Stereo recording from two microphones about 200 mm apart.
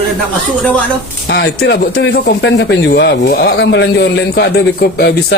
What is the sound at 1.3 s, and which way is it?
Speech, 60° left (ahead or behind).